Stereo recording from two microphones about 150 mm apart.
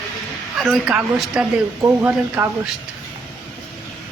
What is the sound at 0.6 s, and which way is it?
Speech, centre (ahead or behind).